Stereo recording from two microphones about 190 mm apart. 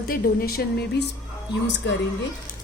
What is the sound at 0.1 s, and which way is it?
Speech, 50° left (ahead or behind).